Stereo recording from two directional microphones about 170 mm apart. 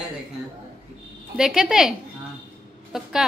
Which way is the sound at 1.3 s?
5° right (ahead or behind).